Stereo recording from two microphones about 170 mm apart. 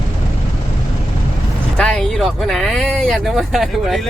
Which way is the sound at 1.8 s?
5° left (ahead or behind).